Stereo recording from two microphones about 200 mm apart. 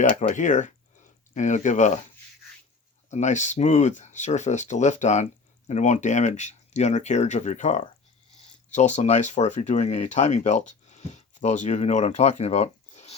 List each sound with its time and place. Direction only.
0.2 s speech: 35° left (ahead or behind)
3.1 s speech: 35° left (ahead or behind)